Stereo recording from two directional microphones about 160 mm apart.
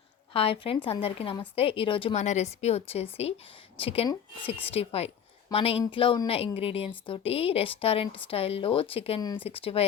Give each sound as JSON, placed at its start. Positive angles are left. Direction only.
{"t": 0.3, "sound": "a woman's voice", "side_deg": 35}
{"t": 2.1, "sound": "a woman's voice", "side_deg": 45}